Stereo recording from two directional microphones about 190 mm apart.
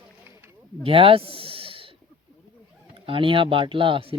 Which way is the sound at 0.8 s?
30° right (ahead or behind).